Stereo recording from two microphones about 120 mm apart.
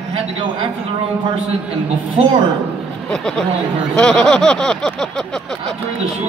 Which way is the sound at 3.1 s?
5° left (ahead or behind).